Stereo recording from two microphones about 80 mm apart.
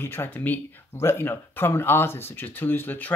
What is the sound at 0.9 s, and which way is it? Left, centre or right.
Speech, left.